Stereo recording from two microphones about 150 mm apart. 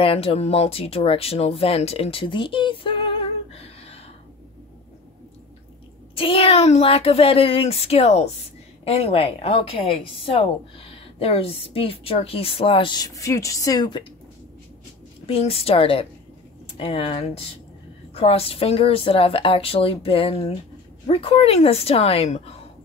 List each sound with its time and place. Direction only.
0.0 s speech: 40° left (ahead or behind)
6.1 s a woman's voice: 40° left (ahead or behind)
15.2 s a woman's voice: 40° left (ahead or behind)